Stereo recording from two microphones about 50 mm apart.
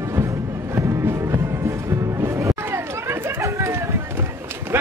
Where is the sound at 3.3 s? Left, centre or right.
Right.